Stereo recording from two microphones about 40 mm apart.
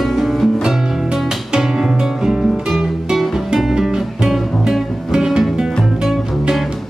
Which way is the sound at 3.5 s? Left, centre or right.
Centre.